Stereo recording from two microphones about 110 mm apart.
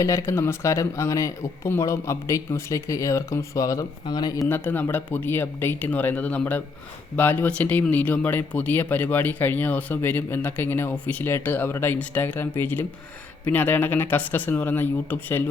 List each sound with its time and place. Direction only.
0.0 s speech: 25° left (ahead or behind)
4.4 s speech: 20° left (ahead or behind)